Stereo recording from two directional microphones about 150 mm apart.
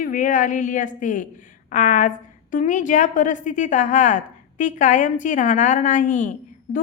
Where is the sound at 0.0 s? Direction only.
60° left (ahead or behind).